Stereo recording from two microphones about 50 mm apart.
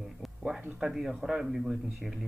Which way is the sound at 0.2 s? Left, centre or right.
Centre.